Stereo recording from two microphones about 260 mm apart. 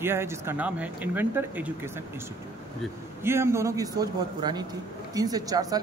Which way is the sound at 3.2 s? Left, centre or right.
Centre.